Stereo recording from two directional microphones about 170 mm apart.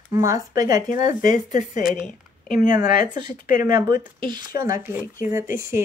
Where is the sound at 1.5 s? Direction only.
45° left (ahead or behind).